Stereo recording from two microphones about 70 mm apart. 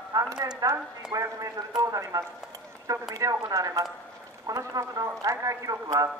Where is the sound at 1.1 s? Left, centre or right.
Right.